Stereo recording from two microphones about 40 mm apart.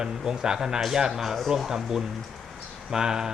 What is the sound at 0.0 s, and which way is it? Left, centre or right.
Speech, centre.